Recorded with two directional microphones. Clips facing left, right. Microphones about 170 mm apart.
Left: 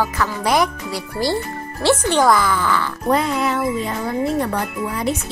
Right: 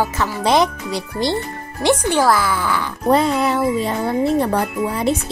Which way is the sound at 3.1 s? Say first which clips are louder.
Right 3 dB; 30° right (ahead or behind).